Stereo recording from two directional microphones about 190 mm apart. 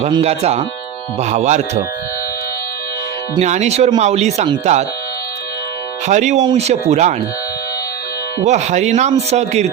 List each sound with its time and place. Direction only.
0.1 s speech: 35° right (ahead or behind)
3.4 s speech: 35° right (ahead or behind)
6.1 s speech: 40° right (ahead or behind)
8.4 s speech: 35° right (ahead or behind)